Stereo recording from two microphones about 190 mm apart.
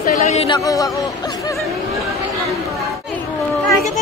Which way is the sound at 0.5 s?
20° left (ahead or behind).